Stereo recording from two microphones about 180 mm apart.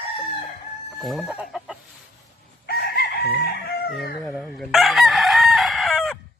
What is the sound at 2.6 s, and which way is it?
Chicken, 60° left (ahead or behind).